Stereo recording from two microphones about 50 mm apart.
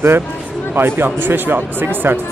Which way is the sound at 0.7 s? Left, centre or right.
Right.